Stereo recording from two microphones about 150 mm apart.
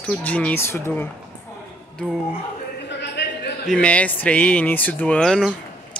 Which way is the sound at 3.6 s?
10° left (ahead or behind).